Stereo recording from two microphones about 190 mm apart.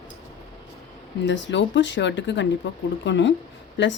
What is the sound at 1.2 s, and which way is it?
Speech, 70° left (ahead or behind).